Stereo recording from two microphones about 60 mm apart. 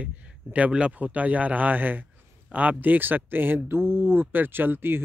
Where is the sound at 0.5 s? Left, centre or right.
Centre.